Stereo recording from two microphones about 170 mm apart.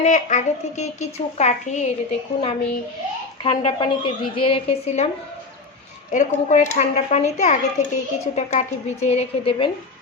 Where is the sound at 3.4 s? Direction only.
30° left (ahead or behind).